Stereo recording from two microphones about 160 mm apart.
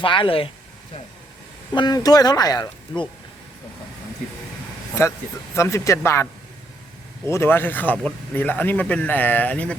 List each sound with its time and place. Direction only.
0.0 s speech: 35° left (ahead or behind)
1.7 s speech: 25° left (ahead or behind)
5.0 s a man's voice: 15° left (ahead or behind)
7.3 s a man's voice: 15° left (ahead or behind)